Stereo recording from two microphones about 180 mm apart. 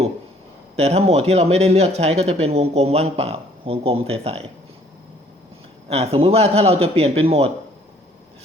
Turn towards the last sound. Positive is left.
turn(degrees=-35)  # may be behind; listen again after turning